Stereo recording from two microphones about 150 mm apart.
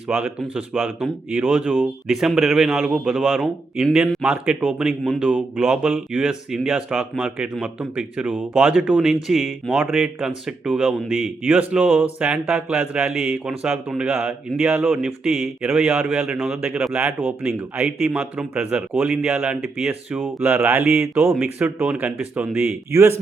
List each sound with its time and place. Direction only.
0.1 s a man's voice: 10° right (ahead or behind)